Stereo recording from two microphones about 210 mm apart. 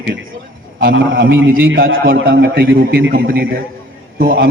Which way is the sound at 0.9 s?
65° right (ahead or behind).